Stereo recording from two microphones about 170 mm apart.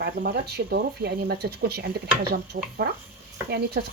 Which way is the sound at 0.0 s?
70° right (ahead or behind).